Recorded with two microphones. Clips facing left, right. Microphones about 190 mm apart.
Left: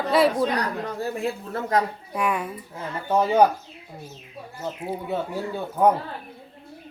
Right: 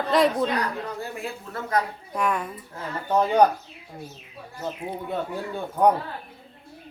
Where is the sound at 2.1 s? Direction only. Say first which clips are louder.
Even; 10° left (ahead or behind).